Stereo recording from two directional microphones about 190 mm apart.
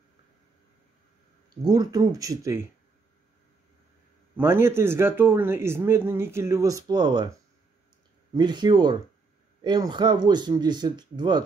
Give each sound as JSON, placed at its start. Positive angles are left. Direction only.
{"t": 1.7, "sound": "speech", "side_deg": -20}
{"t": 4.4, "sound": "speech", "side_deg": -15}
{"t": 8.4, "sound": "speech", "side_deg": -25}